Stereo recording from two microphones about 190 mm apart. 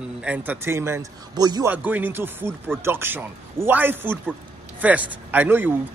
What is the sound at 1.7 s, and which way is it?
Speech, 10° right (ahead or behind).